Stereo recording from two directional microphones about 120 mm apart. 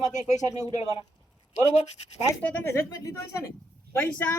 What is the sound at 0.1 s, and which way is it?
Speech, 80° left.